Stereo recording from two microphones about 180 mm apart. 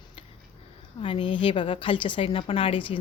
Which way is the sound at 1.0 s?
30° left (ahead or behind).